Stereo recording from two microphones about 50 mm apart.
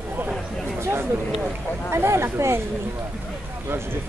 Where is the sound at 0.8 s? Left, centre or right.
Right.